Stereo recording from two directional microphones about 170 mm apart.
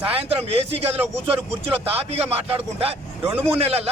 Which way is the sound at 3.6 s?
35° right (ahead or behind).